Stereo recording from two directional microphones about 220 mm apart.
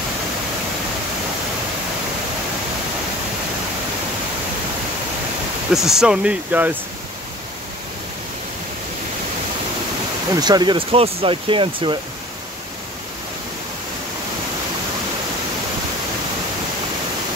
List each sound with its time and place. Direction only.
5.7 s speech: centre (ahead or behind)
10.3 s speech: 20° right (ahead or behind)